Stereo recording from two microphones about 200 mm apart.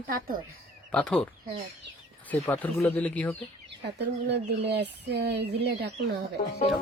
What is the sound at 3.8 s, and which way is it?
Speech, 60° right (ahead or behind).